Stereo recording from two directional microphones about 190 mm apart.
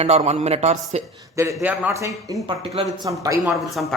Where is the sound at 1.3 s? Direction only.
15° right (ahead or behind).